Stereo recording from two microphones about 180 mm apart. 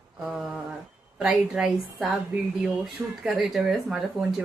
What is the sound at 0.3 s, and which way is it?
Speech, centre (ahead or behind).